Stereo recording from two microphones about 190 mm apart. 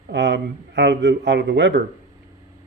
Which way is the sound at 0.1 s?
75° right (ahead or behind).